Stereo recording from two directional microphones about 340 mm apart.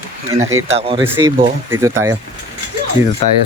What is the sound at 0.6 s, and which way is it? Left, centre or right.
Speech, centre.